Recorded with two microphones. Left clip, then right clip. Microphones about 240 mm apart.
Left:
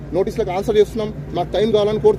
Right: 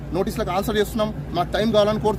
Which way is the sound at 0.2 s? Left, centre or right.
Right.